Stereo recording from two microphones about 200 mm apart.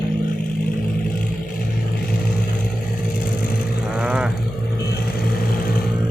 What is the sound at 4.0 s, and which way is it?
Vehicle, 5° right (ahead or behind).